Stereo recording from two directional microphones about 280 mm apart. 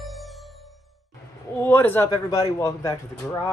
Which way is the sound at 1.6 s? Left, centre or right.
Centre.